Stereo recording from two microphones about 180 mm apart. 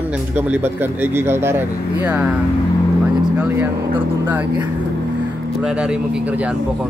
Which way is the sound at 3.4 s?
10° right (ahead or behind).